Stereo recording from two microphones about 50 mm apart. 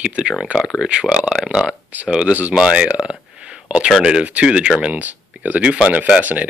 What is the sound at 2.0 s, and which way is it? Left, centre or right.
Speech, right.